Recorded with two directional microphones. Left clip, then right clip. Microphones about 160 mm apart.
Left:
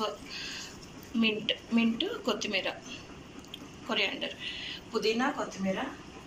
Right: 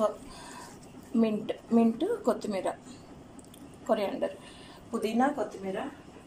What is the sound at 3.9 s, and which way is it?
A woman's voice, 50° right (ahead or behind).